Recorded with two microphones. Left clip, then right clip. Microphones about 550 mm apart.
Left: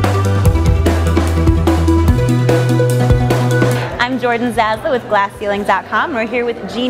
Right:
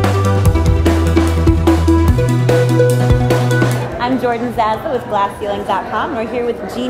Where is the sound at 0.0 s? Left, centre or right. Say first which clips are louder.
Right 1 dB; centre.